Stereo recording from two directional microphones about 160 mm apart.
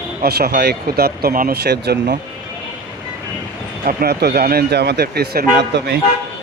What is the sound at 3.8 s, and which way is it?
Speech, 75° right (ahead or behind).